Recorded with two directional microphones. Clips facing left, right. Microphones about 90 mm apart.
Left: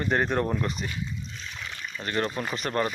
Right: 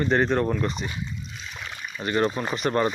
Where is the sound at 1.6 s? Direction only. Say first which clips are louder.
Right 4 dB; 15° right (ahead or behind).